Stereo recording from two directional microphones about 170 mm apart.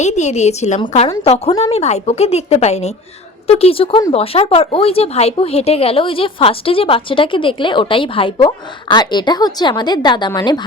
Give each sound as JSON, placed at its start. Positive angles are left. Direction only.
{"t": 0.0, "sound": "speech", "side_deg": 40}